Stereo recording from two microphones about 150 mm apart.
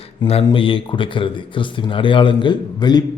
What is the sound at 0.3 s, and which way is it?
A man's voice, 40° left (ahead or behind).